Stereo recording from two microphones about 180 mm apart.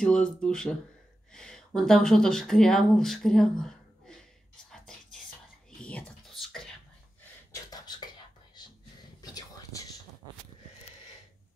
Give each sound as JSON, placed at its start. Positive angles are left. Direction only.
{"t": 0.0, "sound": "speech", "side_deg": 5}
{"t": 4.6, "sound": "whispering", "side_deg": 5}
{"t": 5.8, "sound": "a sound", "side_deg": 5}
{"t": 9.2, "sound": "whispering", "side_deg": 20}